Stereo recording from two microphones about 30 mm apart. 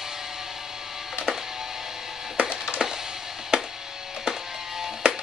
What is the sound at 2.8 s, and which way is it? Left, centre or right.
Wood, centre.